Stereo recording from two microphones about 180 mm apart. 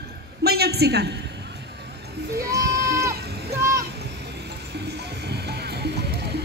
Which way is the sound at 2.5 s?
15° right (ahead or behind).